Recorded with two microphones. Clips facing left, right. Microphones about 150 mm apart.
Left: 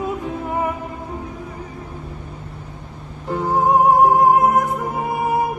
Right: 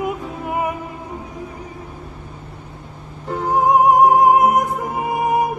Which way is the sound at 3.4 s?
15° right (ahead or behind).